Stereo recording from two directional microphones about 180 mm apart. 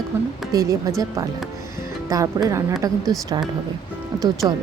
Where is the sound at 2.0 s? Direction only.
20° right (ahead or behind).